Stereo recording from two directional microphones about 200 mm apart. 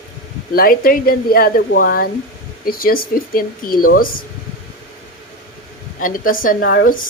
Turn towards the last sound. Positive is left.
turn(degrees=45)  # may be behind; listen again after turning